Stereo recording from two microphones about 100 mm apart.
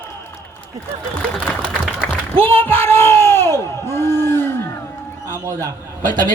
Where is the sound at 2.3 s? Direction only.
70° right (ahead or behind).